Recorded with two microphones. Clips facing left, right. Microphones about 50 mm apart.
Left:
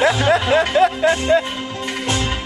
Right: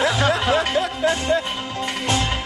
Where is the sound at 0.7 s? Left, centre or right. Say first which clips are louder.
Left 6 dB; left.